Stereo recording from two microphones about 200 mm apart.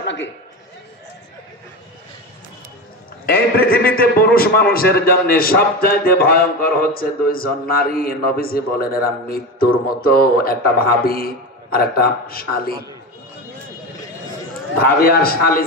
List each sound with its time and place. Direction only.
0.0 s a sound: 65° left (ahead or behind)
3.3 s a man's voice: 50° left (ahead or behind)
14.8 s a man's voice: 50° left (ahead or behind)